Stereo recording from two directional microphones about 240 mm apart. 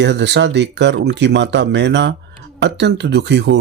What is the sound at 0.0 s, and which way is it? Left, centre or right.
Speech, right.